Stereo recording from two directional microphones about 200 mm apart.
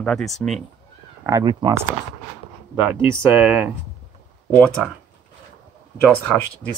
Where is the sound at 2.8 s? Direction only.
5° right (ahead or behind).